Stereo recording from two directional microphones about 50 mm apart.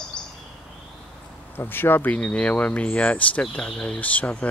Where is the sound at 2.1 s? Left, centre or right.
Left.